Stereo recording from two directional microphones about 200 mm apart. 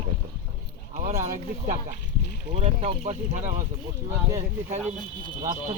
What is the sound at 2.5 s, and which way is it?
Speech, 30° right (ahead or behind).